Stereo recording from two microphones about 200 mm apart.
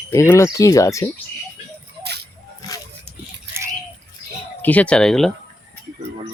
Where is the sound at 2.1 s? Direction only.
55° right (ahead or behind).